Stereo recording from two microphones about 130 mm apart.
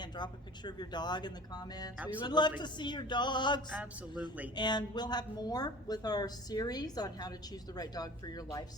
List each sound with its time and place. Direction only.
0.0 s a woman's voice: 35° left (ahead or behind)
3.7 s speech: 10° right (ahead or behind)
4.5 s a woman's voice: 35° left (ahead or behind)